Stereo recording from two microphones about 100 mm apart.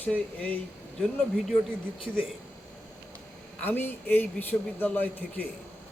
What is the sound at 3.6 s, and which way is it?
Speech, 20° left (ahead or behind).